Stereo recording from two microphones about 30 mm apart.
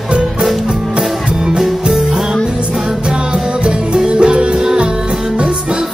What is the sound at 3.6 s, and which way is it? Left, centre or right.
Music, right.